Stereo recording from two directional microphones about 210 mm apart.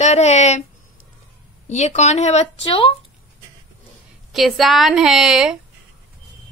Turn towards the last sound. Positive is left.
turn(degrees=0)  # may be behind; listen again after turning